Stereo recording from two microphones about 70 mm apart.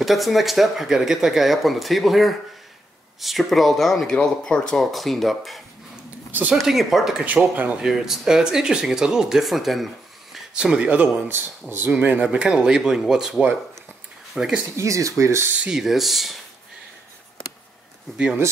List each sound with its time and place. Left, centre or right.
0.0 s speech: centre
7.5 s speech: right
7.8 s speech: centre
10.3 s speech: centre; by 11.5 s right
11.9 s speech: centre
14.8 s speech: right
15.6 s speech: centre
18.1 s speech: centre